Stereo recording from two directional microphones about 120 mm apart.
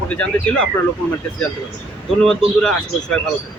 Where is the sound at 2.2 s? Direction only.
5° left (ahead or behind).